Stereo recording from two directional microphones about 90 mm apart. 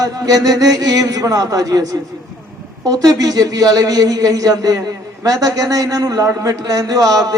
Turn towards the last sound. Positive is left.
turn(degrees=-45)  # may be behind; listen again after turning